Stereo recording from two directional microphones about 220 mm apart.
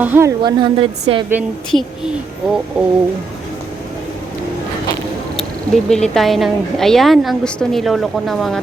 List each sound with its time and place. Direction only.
0.0 s a woman's voice: 10° right (ahead or behind)
1.3 s speech: 5° right (ahead or behind)
5.4 s speech: centre (ahead or behind)